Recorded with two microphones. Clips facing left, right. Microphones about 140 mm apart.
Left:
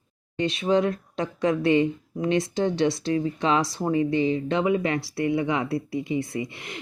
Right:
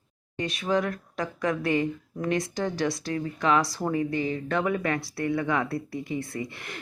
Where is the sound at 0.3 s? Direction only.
25° left (ahead or behind).